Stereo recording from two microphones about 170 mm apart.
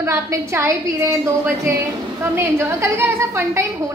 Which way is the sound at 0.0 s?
15° right (ahead or behind).